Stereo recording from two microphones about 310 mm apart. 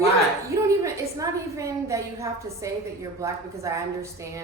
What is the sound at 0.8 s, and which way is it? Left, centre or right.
A woman's voice, centre.